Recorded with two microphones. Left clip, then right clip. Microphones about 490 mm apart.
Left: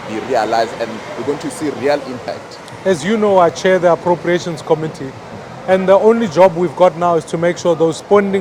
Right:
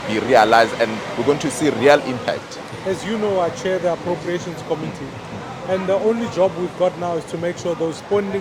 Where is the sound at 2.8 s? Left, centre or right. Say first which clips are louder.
Left 8 dB; left.